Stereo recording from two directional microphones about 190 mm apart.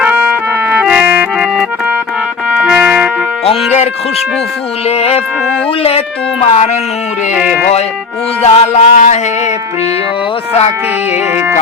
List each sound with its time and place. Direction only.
0.7 s clarinet: 5° right (ahead or behind)
2.6 s trumpet: 5° right (ahead or behind)
3.4 s speech: 30° left (ahead or behind)
4.9 s music: 30° left (ahead or behind)
6.4 s music: 35° left (ahead or behind)
8.4 s music: 35° left (ahead or behind)